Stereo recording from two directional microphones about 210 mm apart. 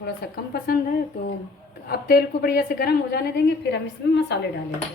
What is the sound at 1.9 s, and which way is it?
A woman's voice, 45° left (ahead or behind).